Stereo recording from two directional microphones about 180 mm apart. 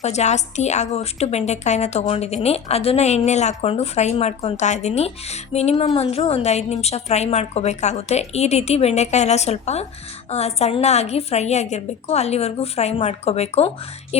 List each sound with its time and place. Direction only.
0.0 s a woman's voice: 40° left (ahead or behind)